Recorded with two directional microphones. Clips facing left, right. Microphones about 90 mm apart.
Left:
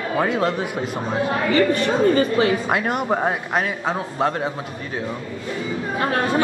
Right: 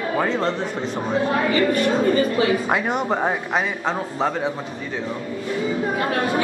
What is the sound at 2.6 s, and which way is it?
Speech, centre (ahead or behind).